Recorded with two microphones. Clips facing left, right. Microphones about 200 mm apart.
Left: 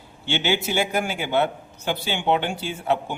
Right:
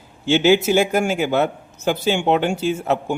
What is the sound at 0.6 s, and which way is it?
Speech, 45° right (ahead or behind).